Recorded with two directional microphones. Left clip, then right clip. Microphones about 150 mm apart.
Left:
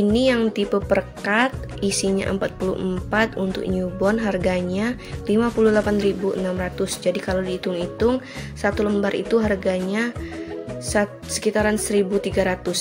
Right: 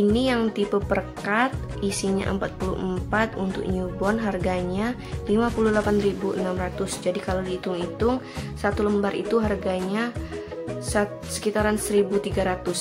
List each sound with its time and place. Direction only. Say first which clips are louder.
0.1 s speech: left 4 dB; 20° left (ahead or behind)